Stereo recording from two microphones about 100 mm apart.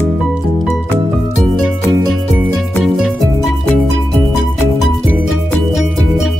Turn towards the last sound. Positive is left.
turn(degrees=0)  # may be behind; listen again after turning